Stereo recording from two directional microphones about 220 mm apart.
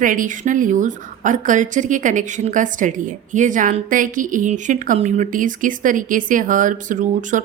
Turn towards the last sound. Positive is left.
turn(degrees=-35)  # may be behind; listen again after turning